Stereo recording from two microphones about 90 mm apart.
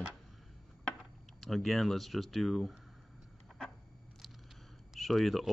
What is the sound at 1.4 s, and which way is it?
Speech, 5° left (ahead or behind).